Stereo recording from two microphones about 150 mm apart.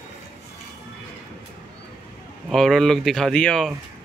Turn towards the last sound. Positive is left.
turn(degrees=5)  # may be behind; listen again after turning